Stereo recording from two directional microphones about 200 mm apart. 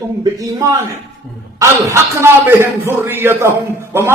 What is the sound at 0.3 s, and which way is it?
A man's voice, 15° right (ahead or behind).